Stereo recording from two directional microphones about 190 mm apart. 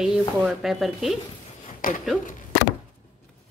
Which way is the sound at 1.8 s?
45° left (ahead or behind).